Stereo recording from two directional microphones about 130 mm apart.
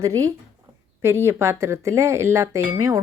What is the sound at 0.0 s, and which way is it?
A woman's voice, 25° right (ahead or behind).